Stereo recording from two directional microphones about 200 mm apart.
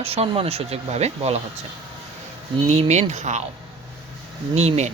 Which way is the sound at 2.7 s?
35° right (ahead or behind).